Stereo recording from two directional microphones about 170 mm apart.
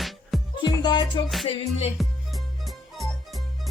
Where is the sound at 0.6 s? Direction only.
25° left (ahead or behind).